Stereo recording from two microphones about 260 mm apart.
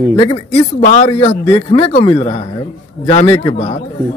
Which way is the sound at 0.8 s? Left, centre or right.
Left.